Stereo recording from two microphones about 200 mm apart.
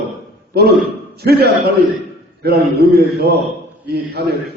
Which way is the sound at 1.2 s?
55° right (ahead or behind).